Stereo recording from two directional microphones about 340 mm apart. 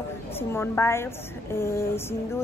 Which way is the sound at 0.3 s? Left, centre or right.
Centre.